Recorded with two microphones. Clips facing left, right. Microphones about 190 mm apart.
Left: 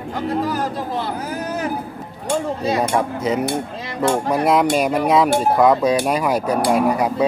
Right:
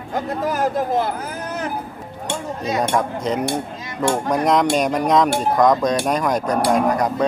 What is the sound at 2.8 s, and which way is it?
Cutlery, 5° left (ahead or behind).